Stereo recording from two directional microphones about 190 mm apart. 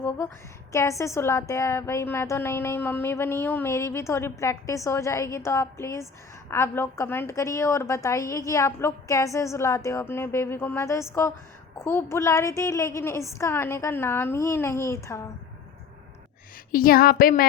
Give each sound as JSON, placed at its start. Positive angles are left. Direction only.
{"t": 0.7, "sound": "a woman's voice", "side_deg": 15}
{"t": 16.7, "sound": "speech", "side_deg": 50}